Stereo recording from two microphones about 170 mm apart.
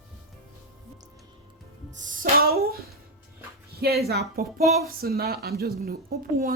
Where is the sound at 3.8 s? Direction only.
65° right (ahead or behind).